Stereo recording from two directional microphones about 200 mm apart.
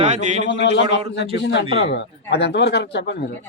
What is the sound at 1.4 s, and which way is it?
A man's voice, 60° left (ahead or behind).